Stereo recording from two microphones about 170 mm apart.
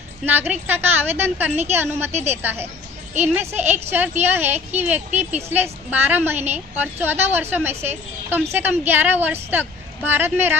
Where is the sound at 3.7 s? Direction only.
10° right (ahead or behind).